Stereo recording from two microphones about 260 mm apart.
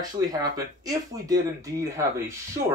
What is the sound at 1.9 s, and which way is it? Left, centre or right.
Speech, centre.